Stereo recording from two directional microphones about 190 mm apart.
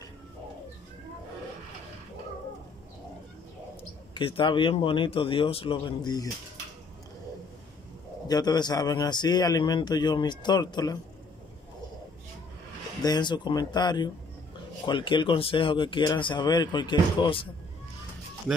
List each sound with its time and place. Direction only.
4.1 s a man's voice: 25° left (ahead or behind)
8.3 s a man's voice: 20° left (ahead or behind)
13.0 s a man's voice: 20° left (ahead or behind)